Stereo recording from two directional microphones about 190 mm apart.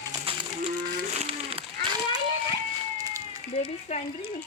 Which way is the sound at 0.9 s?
35° right (ahead or behind).